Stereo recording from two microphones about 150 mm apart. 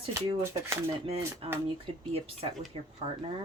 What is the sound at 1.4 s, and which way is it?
Speech, 40° right (ahead or behind).